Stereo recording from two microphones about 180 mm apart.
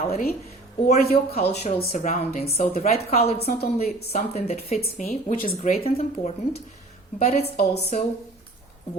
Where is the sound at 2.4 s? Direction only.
35° left (ahead or behind).